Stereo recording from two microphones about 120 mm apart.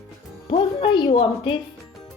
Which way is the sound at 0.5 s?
45° left (ahead or behind).